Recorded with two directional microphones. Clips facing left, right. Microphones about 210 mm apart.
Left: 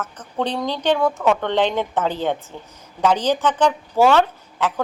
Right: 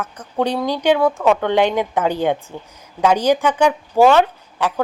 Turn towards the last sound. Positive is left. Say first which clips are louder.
# right 2 dB
turn(degrees=-10)  # may be behind; listen again after turning